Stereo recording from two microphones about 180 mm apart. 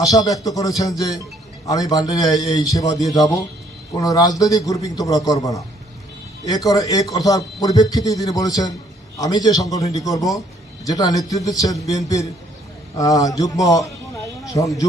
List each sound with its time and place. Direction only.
0.1 s a man's voice: 20° left (ahead or behind)